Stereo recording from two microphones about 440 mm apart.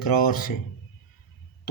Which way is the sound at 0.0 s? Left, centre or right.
Left.